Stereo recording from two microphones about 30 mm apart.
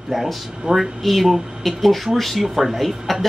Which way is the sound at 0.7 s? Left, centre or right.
Right.